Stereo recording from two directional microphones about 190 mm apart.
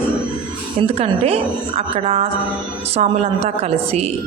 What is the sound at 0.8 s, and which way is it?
Speech, 35° right (ahead or behind).